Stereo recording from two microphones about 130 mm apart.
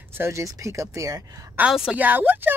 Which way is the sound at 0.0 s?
20° right (ahead or behind).